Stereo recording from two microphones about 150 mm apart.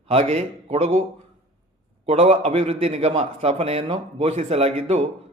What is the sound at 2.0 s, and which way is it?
A man's voice, 45° right (ahead or behind).